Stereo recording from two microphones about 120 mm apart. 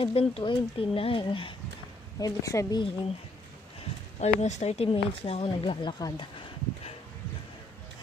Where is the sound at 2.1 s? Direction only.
30° left (ahead or behind).